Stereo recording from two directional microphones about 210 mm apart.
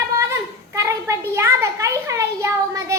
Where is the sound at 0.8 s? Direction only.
15° right (ahead or behind).